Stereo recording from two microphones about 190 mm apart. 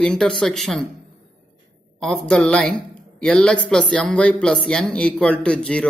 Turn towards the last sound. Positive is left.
turn(degrees=5)  # may be behind; listen again after turning